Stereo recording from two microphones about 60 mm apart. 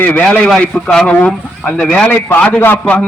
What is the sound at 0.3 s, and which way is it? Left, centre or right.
Speech, centre.